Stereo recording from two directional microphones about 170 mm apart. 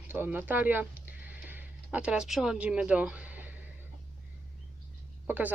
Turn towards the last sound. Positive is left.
turn(degrees=-10)  # may be behind; listen again after turning